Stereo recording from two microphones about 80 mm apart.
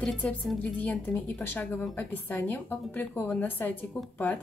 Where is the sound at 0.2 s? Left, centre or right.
Centre.